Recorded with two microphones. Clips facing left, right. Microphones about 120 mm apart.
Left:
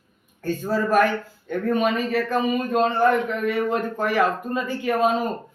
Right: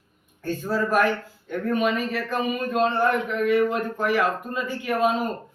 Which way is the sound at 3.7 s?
40° left (ahead or behind).